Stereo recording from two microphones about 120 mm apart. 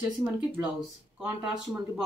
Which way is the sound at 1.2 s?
5° right (ahead or behind).